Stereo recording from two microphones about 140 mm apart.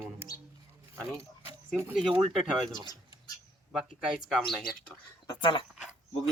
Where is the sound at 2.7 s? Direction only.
30° left (ahead or behind).